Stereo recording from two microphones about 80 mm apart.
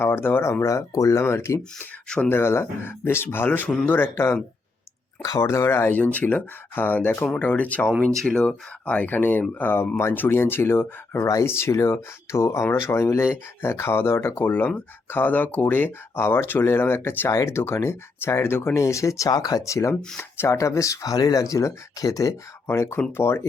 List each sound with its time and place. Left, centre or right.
0.0 s speech: left
0.6 s speech: left
2.0 s speech: centre
2.3 s speech: left
5.4 s speech: left